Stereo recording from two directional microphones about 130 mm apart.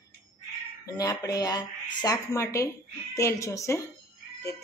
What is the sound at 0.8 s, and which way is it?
A woman's voice, 30° left (ahead or behind).